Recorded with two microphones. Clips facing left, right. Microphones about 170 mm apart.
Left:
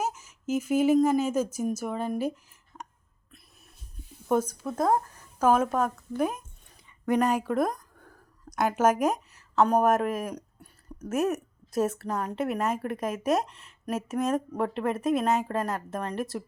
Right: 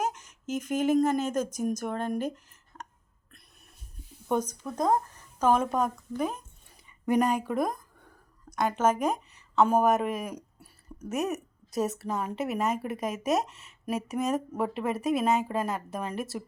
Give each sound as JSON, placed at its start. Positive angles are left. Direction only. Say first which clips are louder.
{"t": 0.0, "sound": "speech", "louder": "even", "side_deg": 5}
{"t": 4.3, "sound": "a woman's voice", "louder": "left 3 dB", "side_deg": 5}
{"t": 7.0, "sound": "a woman's voice", "louder": "even", "side_deg": -10}